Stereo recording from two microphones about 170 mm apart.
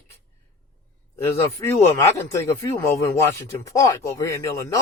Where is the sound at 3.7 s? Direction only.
20° left (ahead or behind).